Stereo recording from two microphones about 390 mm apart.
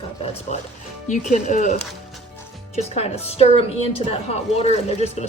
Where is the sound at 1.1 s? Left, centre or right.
Centre.